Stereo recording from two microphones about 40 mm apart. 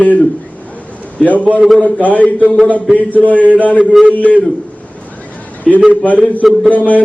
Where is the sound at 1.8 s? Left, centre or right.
Left.